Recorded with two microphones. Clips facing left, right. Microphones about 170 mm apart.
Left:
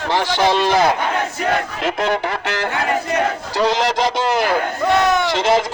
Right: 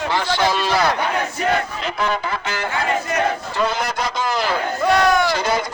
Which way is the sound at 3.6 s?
90° left.